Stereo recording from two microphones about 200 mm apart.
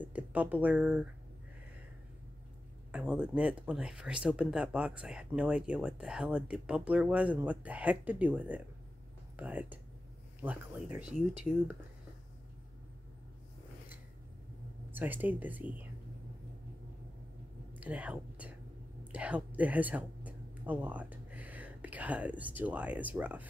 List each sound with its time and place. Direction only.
0.0 s speech: 5° right (ahead or behind)
2.9 s speech: 5° right (ahead or behind)
14.9 s speech: 10° right (ahead or behind)
17.7 s speech: 5° right (ahead or behind)